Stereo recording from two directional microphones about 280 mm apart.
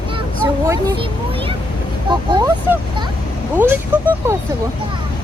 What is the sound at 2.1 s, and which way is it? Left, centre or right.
Speech, centre.